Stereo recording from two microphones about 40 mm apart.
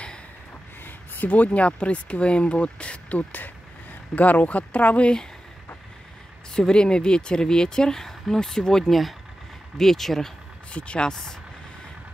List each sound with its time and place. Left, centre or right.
0.8 s speech: left
6.5 s speech: centre
10.7 s speech: left
11.1 s speech: centre